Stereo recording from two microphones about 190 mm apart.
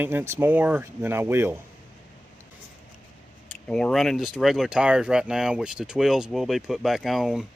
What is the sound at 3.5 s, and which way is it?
Speech, 5° left (ahead or behind).